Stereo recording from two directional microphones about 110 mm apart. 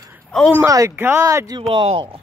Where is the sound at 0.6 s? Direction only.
25° right (ahead or behind).